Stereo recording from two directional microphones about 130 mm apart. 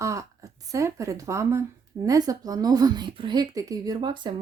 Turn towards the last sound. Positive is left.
turn(degrees=-35)  # may be behind; listen again after turning